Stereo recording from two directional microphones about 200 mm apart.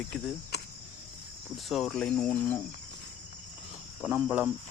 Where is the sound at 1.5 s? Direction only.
Centre (ahead or behind).